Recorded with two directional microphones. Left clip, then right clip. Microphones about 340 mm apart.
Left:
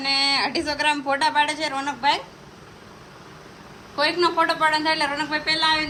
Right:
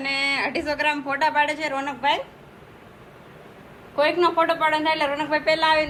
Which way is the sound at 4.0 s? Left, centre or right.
Centre.